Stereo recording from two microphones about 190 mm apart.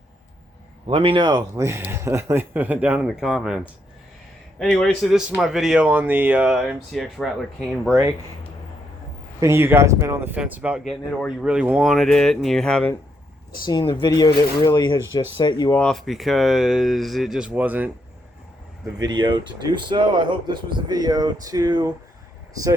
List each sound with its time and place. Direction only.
0.9 s speech: 25° right (ahead or behind); by 7.3 s centre (ahead or behind)
9.4 s speech: 15° right (ahead or behind); by 12.9 s 5° left (ahead or behind)
13.7 s speech: 20° left (ahead or behind)
15.7 s speech: 5° left (ahead or behind)
18.9 s speech: 25° right (ahead or behind)